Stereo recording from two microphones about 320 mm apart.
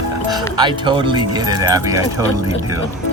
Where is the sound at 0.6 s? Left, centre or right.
Centre.